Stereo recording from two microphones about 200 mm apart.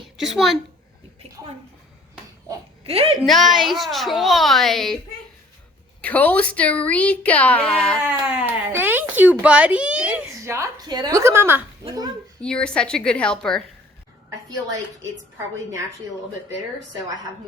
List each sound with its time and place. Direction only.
0.2 s a child's voice: centre (ahead or behind)
2.8 s a woman's voice: 30° right (ahead or behind)
3.2 s a child's voice: centre (ahead or behind)
6.0 s a woman's voice: 10° left (ahead or behind)
8.0 s speech: 10° right (ahead or behind)
12.4 s a child's voice: 5° left (ahead or behind)